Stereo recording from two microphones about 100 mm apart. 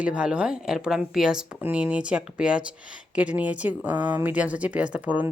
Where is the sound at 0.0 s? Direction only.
10° right (ahead or behind).